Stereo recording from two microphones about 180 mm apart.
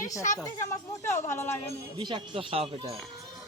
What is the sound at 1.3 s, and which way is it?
Speech, 15° left (ahead or behind).